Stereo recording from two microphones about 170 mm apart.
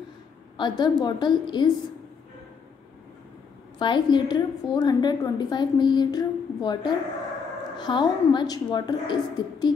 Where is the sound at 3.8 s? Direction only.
25° left (ahead or behind).